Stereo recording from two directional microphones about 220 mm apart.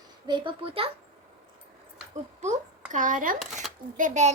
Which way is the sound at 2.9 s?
35° right (ahead or behind).